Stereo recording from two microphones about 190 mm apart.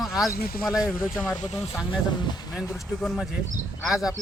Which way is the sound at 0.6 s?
5° right (ahead or behind).